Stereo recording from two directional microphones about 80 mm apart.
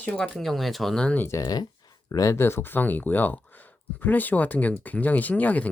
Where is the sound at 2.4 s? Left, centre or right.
Left.